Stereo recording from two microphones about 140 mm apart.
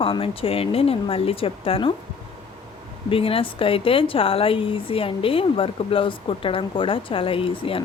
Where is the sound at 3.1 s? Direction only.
40° left (ahead or behind).